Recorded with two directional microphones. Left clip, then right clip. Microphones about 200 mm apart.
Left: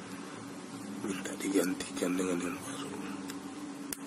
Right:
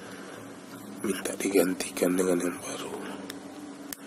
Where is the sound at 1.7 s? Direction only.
45° right (ahead or behind).